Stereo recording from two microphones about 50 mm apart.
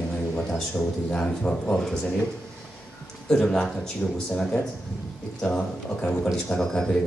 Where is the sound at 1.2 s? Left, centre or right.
Left.